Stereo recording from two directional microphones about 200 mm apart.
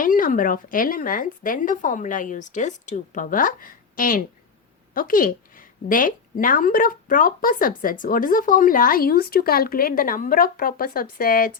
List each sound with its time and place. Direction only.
0.0 s a woman's voice: 40° left (ahead or behind)